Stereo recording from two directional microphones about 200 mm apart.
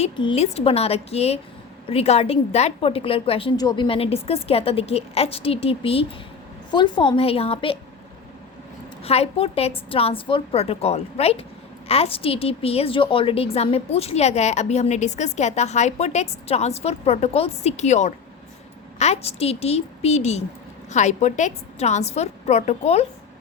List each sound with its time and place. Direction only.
0.0 s a woman's voice: 30° left (ahead or behind)
9.0 s a woman's voice: 30° left (ahead or behind)